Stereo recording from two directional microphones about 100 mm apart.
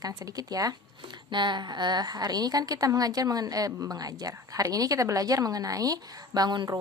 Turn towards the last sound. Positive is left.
turn(degrees=-45)  # may be behind; listen again after turning